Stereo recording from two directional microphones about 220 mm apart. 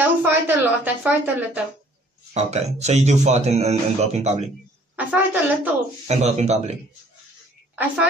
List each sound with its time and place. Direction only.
0.2 s a woman's voice: 10° right (ahead or behind)
2.3 s speech: 30° right (ahead or behind)
4.9 s speech: 5° right (ahead or behind)
6.0 s speech: 30° right (ahead or behind)
7.7 s a woman's voice: 5° right (ahead or behind)